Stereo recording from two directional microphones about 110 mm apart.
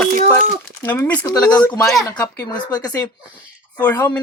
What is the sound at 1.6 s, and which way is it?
Speech, 40° left (ahead or behind).